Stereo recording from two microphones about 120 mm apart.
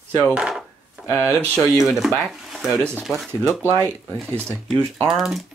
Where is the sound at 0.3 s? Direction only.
5° right (ahead or behind).